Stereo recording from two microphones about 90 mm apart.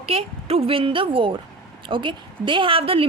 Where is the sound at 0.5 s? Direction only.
85° right.